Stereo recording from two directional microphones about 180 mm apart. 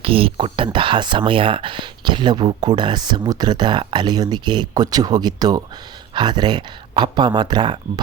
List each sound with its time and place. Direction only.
0.0 s speech: 30° right (ahead or behind)